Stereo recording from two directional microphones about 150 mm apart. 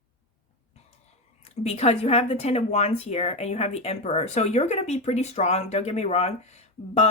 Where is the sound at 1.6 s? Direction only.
45° left (ahead or behind).